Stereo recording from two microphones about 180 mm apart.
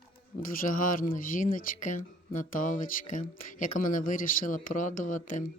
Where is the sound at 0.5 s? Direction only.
50° left (ahead or behind).